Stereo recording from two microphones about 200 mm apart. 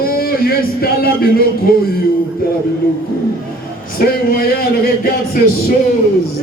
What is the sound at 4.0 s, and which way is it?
Speech, 45° left (ahead or behind).